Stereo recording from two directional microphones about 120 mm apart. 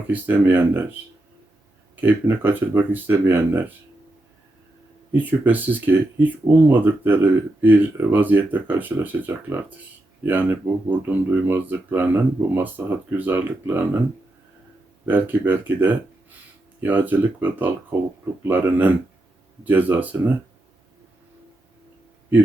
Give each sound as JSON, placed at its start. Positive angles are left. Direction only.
{"t": 0.1, "sound": "speech", "side_deg": -15}
{"t": 2.0, "sound": "speech", "side_deg": -15}
{"t": 5.1, "sound": "speech", "side_deg": -15}
{"t": 15.0, "sound": "speech", "side_deg": -15}